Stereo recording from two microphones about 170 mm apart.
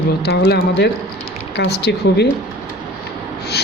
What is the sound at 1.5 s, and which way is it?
Speech, 85° left.